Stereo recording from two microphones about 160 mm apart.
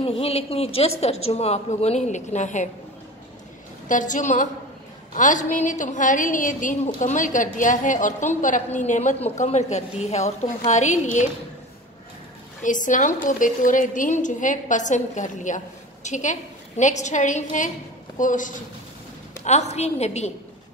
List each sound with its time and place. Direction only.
0.0 s a man's voice: 35° left (ahead or behind)
3.9 s a woman's voice: 50° left (ahead or behind)
12.6 s a woman's voice: 55° left (ahead or behind)